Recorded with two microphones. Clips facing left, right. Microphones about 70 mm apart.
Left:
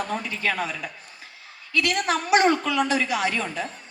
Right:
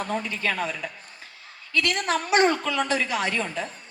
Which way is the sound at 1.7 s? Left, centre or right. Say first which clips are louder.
Left 1 dB; right.